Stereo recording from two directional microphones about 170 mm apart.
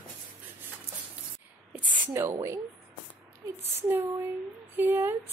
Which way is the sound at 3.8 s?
10° right (ahead or behind).